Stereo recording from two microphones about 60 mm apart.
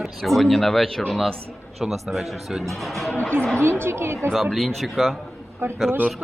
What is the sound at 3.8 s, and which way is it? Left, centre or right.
Speech, right.